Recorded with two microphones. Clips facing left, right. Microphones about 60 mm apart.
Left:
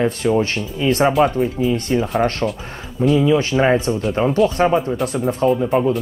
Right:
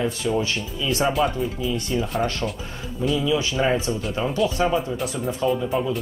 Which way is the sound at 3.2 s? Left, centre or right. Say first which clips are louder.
Left 6 dB; left.